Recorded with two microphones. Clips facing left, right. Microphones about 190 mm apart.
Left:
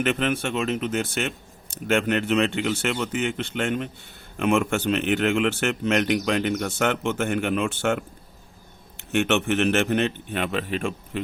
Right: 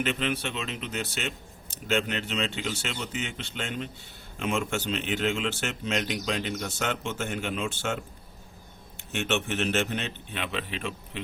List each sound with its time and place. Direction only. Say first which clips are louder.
0.0 s a man's voice: left 5 dB; 50° left (ahead or behind)